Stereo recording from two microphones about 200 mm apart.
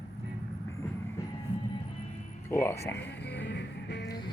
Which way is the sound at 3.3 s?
60° left (ahead or behind).